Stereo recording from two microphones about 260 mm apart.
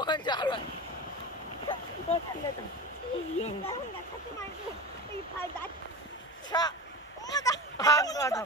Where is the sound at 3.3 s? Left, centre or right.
Left.